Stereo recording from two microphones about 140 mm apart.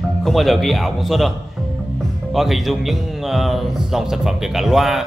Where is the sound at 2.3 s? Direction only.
Centre (ahead or behind).